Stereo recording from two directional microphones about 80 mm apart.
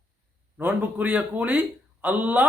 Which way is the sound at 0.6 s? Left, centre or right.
Centre.